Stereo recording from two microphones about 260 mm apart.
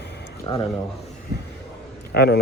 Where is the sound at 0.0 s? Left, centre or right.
Left.